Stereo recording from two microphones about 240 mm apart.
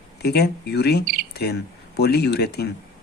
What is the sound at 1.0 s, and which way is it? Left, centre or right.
Speech, right.